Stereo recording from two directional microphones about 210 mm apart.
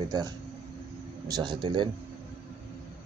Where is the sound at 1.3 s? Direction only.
20° right (ahead or behind).